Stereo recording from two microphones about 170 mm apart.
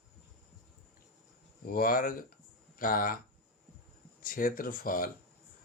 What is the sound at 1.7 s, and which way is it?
Speech, 60° left (ahead or behind).